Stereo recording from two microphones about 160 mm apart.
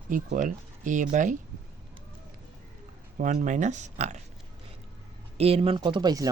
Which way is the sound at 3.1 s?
55° right (ahead or behind).